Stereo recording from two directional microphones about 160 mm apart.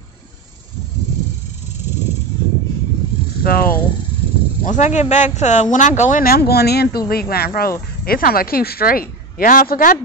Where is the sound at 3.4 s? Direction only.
65° left (ahead or behind).